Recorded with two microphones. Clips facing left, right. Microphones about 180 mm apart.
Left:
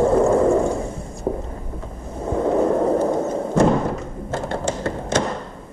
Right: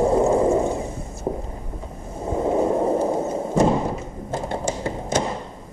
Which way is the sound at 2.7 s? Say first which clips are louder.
Left 2 dB; 10° right (ahead or behind).